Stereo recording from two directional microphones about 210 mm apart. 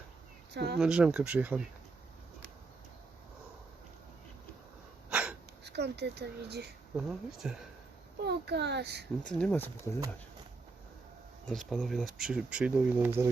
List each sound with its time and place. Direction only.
0.5 s a child's voice: 50° right (ahead or behind)
0.8 s speech: 5° right (ahead or behind)
5.0 s sneeze: 5° right (ahead or behind)
5.6 s speech: 50° right (ahead or behind)
6.9 s speech: centre (ahead or behind)
8.2 s a child's voice: 50° right (ahead or behind)
9.2 s speech: 5° left (ahead or behind)
11.7 s speech: centre (ahead or behind)